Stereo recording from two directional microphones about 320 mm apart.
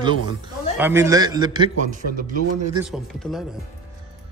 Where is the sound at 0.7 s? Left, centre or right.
Centre; by 2.7 s right.